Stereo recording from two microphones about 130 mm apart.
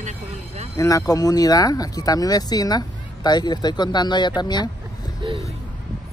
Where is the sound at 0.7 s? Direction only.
25° left (ahead or behind).